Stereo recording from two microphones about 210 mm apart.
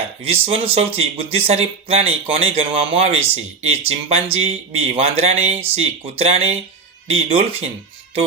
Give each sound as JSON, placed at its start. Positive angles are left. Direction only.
{"t": 0.2, "sound": "speech", "side_deg": -25}